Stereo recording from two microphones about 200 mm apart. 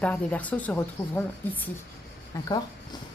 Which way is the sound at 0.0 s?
5° left (ahead or behind).